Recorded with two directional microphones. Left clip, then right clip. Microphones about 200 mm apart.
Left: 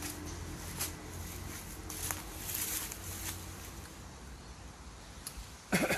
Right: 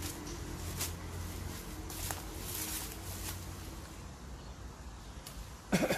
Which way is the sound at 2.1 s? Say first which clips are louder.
Left 1 dB; 15° right (ahead or behind).